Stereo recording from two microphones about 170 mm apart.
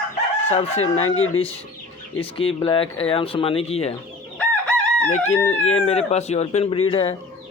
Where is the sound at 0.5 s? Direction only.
35° left (ahead or behind).